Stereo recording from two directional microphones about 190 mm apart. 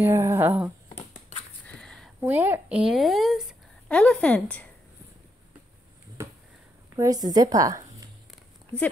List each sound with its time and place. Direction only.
0.0 s speech: 15° right (ahead or behind)
1.7 s a sound: 5° left (ahead or behind)
2.1 s a woman's voice: 10° right (ahead or behind); by 4.6 s 5° left (ahead or behind)
7.0 s a woman's voice: 20° right (ahead or behind)